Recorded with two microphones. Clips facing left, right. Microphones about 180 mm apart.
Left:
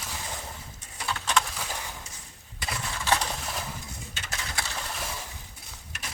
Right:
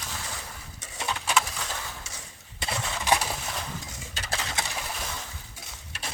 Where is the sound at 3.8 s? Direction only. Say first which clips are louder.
Even; 90° right.